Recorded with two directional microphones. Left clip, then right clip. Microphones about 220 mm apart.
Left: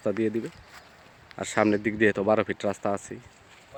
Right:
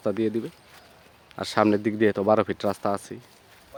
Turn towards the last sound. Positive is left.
turn(degrees=-10)  # may be behind; listen again after turning